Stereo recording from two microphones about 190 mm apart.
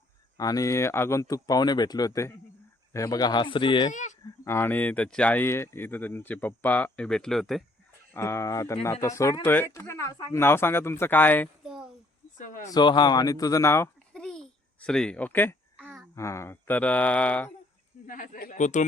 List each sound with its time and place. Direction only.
0.3 s speech: 20° left (ahead or behind)
4.4 s speech: 10° left (ahead or behind)
8.1 s speech: 15° left (ahead or behind)
11.6 s a child's voice: centre (ahead or behind)
12.4 s a man's voice: 45° left (ahead or behind)
12.7 s a child's voice: 25° left (ahead or behind)
15.8 s babbling: 10° right (ahead or behind)
16.1 s speech: 15° left (ahead or behind)
18.0 s a man's voice: 45° left (ahead or behind)